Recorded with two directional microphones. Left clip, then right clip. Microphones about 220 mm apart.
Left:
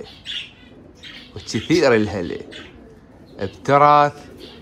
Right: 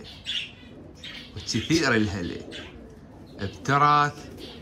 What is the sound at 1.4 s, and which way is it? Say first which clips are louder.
Speech: left 7 dB; 15° right (ahead or behind).